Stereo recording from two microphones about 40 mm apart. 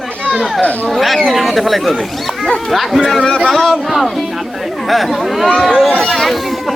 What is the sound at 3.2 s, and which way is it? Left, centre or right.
Speech, centre.